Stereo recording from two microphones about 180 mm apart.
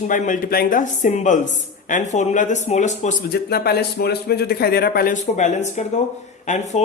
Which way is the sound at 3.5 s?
60° left (ahead or behind).